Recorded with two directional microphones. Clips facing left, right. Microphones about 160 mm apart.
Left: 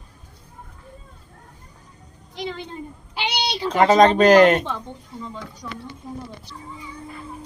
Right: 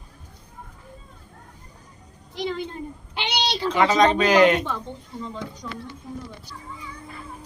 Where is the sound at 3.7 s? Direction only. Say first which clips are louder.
Left 5 dB; 45° left (ahead or behind).